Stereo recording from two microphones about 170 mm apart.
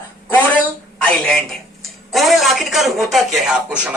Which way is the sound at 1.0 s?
5° left (ahead or behind).